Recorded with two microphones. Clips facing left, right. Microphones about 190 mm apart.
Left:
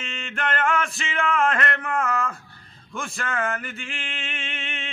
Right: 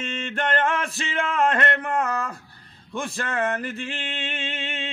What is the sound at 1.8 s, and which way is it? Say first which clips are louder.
Mantra: even; 20° right (ahead or behind).